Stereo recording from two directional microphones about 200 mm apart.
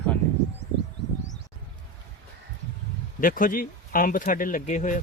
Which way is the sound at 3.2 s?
45° left (ahead or behind).